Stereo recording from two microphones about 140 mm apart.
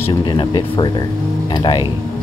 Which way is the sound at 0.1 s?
35° left (ahead or behind).